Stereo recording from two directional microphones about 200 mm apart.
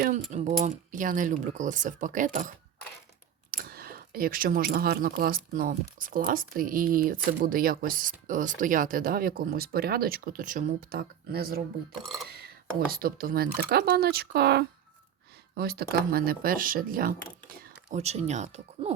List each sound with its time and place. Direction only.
0.3 s speech: 35° right (ahead or behind); by 11.6 s 50° right (ahead or behind)
12.9 s speech: 50° right (ahead or behind)
17.5 s speech: 35° right (ahead or behind)